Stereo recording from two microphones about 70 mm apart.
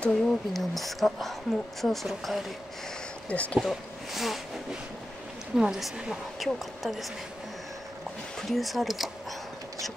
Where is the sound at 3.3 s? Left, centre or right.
Centre.